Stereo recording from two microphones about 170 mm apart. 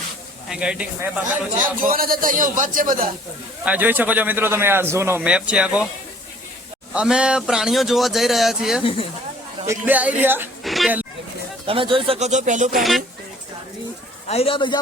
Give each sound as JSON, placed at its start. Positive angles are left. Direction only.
{"t": 0.4, "sound": "speech", "side_deg": -5}
{"t": 1.8, "sound": "speech", "side_deg": -55}
{"t": 3.6, "sound": "speech", "side_deg": -10}
{"t": 6.9, "sound": "speech", "side_deg": -5}
{"t": 8.8, "sound": "a man's voice", "side_deg": 30}
{"t": 9.6, "sound": "speech", "side_deg": -10}
{"t": 10.6, "sound": "a sound", "side_deg": 0}
{"t": 11.6, "sound": "speech", "side_deg": -30}
{"t": 12.7, "sound": "speech", "side_deg": 0}
{"t": 14.3, "sound": "a man's voice", "side_deg": 35}